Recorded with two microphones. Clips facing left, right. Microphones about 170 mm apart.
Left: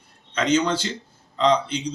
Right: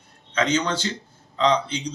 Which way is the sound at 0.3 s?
10° left (ahead or behind).